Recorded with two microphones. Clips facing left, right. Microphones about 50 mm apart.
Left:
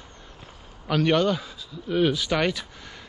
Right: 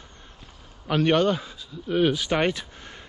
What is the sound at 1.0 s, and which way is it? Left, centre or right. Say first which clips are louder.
Speech: right 1 dB; right.